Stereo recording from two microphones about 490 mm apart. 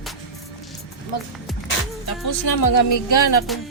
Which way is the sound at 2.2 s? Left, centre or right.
Left.